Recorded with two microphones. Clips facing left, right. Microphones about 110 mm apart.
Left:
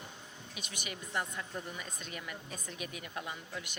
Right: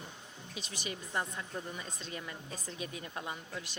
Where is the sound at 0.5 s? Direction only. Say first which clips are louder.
Right 3 dB; 30° right (ahead or behind).